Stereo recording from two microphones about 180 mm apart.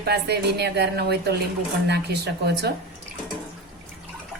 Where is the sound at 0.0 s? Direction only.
65° right (ahead or behind).